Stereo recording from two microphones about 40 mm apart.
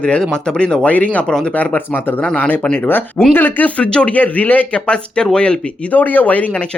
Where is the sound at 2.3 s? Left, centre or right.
Left.